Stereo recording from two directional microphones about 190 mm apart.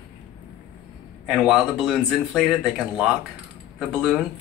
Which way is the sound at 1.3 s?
Centre (ahead or behind).